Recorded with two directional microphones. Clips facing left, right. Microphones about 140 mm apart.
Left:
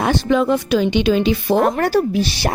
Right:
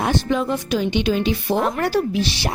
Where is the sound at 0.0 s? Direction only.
90° left.